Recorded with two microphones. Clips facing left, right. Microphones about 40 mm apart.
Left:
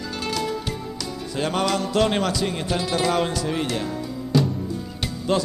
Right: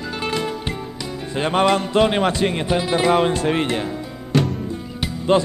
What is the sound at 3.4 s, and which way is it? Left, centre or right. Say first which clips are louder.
Speech: right 5 dB; right.